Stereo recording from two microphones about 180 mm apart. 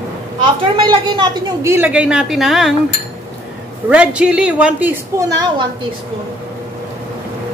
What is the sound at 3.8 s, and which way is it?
A woman's voice, 5° right (ahead or behind).